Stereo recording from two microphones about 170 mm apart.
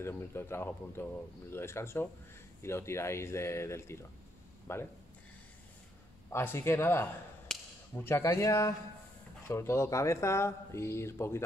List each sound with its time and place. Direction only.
0.0 s speech: 15° left (ahead or behind)
6.3 s speech: 15° left (ahead or behind)
7.5 s a sound: 5° left (ahead or behind)
7.9 s speech: 15° left (ahead or behind)